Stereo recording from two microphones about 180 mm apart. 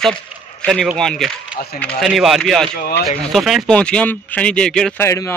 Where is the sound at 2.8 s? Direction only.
60° left (ahead or behind).